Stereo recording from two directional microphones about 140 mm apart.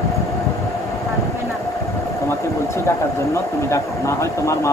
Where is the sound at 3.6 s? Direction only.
20° left (ahead or behind).